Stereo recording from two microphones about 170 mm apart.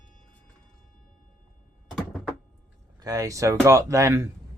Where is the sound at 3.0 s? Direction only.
20° right (ahead or behind).